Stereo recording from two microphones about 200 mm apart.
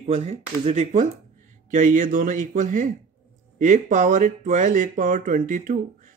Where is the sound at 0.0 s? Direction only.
35° right (ahead or behind).